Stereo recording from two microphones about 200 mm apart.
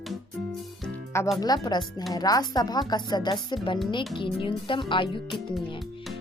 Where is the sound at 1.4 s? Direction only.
20° left (ahead or behind).